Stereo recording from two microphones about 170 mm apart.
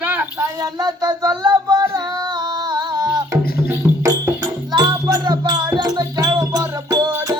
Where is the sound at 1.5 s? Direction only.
25° right (ahead or behind).